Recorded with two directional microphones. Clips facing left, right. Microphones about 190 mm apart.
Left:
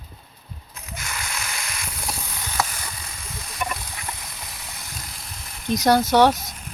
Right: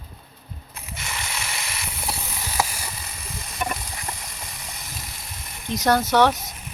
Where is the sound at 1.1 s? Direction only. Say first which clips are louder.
Right 1 dB; 5° right (ahead or behind).